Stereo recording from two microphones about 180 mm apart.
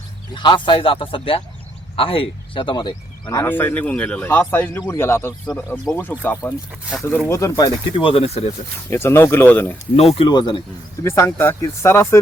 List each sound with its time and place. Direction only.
0.3 s speech: 25° left (ahead or behind)
8.9 s speech: 15° left (ahead or behind)
9.9 s speech: 35° left (ahead or behind)
11.0 s speech: 15° left (ahead or behind)